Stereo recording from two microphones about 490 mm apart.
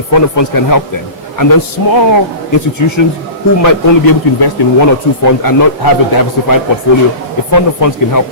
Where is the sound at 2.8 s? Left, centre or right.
Left.